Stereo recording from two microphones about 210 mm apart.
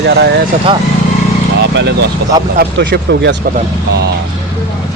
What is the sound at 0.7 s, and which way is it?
Speech, 20° right (ahead or behind).